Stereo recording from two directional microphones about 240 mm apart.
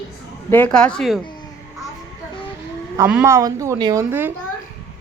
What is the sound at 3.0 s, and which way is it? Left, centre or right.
A woman's voice, centre.